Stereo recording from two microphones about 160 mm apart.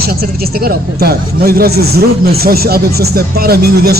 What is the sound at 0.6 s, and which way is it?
A man's voice, 75° right (ahead or behind).